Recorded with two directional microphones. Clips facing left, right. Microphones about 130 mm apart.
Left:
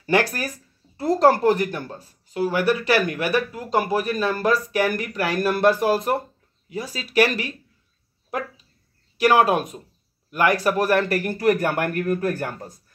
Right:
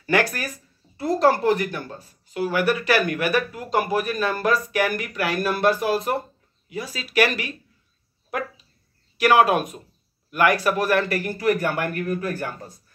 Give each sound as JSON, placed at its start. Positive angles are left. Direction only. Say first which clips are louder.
{"t": 0.0, "sound": "speech", "louder": "left 1 dB", "side_deg": 30}
{"t": 2.3, "sound": "speech", "louder": "left 1 dB", "side_deg": 30}
{"t": 9.2, "sound": "speech", "louder": "even", "side_deg": 35}